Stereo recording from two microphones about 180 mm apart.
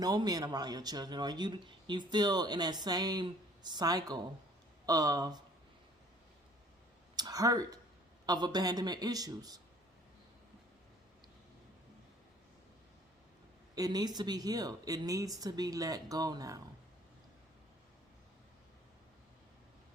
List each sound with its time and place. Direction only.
0.0 s speech: 20° right (ahead or behind)
7.2 s speech: 20° right (ahead or behind)
13.7 s speech: 20° right (ahead or behind)